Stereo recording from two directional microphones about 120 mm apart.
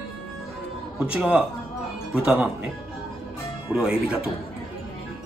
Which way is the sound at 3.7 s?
5° right (ahead or behind).